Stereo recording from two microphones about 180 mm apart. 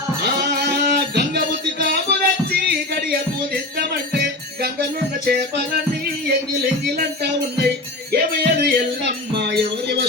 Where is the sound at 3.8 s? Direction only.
65° right (ahead or behind).